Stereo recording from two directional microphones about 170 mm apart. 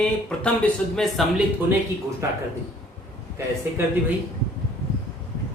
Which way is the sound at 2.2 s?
15° right (ahead or behind).